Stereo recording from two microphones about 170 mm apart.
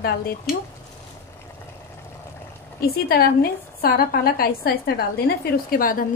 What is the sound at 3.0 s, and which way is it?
A woman's voice, 65° left (ahead or behind).